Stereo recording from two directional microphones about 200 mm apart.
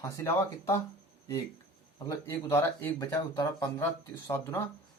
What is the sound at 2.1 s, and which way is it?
Speech, 15° left (ahead or behind).